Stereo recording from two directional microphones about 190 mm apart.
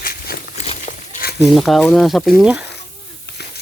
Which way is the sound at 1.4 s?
Centre (ahead or behind).